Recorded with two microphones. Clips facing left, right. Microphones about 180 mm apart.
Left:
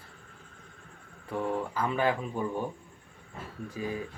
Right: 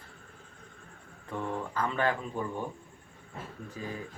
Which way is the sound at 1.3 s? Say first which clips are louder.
Left 4 dB; 10° left (ahead or behind).